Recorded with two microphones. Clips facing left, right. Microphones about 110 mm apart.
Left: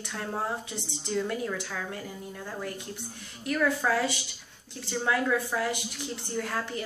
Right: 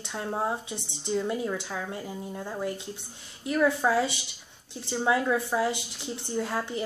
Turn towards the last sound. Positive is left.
turn(degrees=-20)  # may be behind; listen again after turning